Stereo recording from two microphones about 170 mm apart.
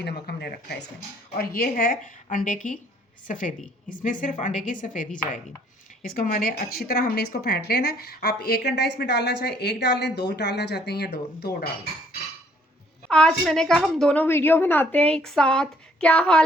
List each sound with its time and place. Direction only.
0.0 s a woman's voice: 70° left (ahead or behind)
13.1 s a woman's voice: 5° left (ahead or behind)